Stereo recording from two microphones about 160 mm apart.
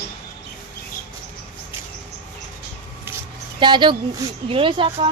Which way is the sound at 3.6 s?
30° right (ahead or behind).